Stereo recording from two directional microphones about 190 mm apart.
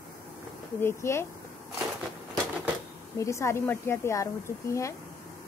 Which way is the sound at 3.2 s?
15° left (ahead or behind).